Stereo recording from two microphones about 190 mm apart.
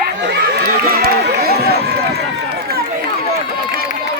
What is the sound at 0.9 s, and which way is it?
Run, 55° right (ahead or behind).